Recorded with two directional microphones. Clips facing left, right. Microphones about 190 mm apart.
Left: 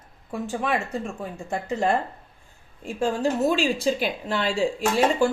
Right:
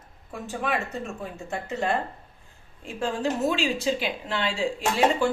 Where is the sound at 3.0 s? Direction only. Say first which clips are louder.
Left 3 dB; 45° left (ahead or behind).